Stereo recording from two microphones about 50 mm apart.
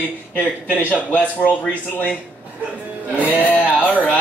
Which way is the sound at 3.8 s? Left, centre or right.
Left.